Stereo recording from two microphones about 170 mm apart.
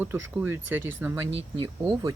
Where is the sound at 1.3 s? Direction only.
25° right (ahead or behind).